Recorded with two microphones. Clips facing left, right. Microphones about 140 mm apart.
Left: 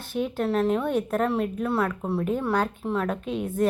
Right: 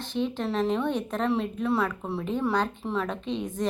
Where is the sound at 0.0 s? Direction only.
10° left (ahead or behind).